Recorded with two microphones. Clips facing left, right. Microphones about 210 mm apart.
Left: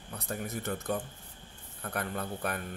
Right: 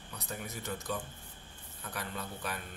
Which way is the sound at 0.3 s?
55° left (ahead or behind).